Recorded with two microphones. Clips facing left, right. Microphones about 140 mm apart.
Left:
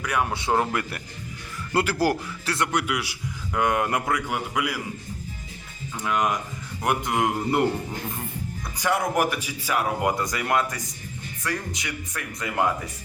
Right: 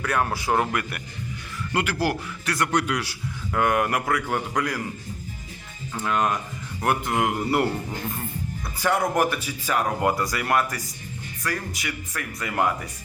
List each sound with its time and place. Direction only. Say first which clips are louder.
0.0 s speech: right 1 dB; 15° left (ahead or behind)
0.3 s speech: even; 25° left (ahead or behind)
1.7 s a man's voice: left 2 dB; 35° left (ahead or behind)
2.7 s speech: right 2 dB; 10° left (ahead or behind)
4.1 s speech: right 1 dB; 10° left (ahead or behind)
6.0 s speech: right 1 dB; 15° left (ahead or behind)
8.8 s speech: right 1 dB; 10° left (ahead or behind)